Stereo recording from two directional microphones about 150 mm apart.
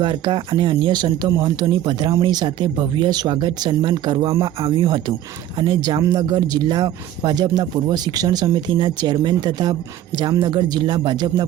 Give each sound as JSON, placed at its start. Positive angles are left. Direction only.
{"t": 0.0, "sound": "speech", "side_deg": -30}